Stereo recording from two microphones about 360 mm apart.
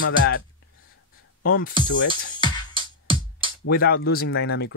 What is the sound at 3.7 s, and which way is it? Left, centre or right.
Speech, left.